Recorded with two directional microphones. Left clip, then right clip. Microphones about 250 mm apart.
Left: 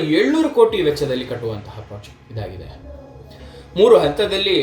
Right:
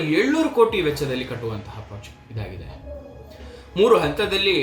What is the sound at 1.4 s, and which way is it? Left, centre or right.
Speech, right.